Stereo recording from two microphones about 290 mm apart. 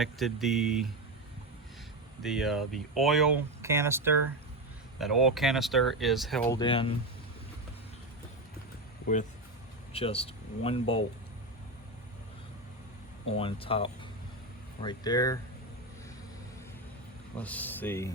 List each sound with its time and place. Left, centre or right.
0.0 s speech: centre
2.2 s speech: centre
6.5 s speech: centre
9.9 s speech: centre
13.2 s speech: centre
17.3 s speech: centre